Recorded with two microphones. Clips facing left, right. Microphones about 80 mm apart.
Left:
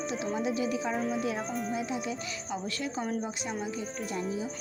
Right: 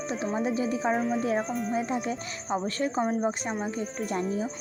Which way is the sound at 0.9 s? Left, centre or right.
Centre.